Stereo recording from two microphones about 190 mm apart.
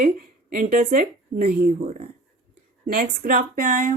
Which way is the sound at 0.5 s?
45° right (ahead or behind).